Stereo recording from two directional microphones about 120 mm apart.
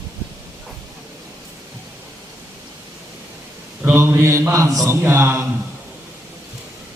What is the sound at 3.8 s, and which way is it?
A man's voice, 15° right (ahead or behind).